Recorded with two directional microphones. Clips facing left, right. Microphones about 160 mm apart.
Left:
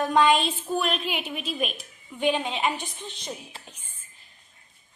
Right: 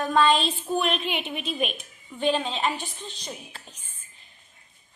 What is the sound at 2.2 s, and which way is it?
Child singing, 15° left (ahead or behind).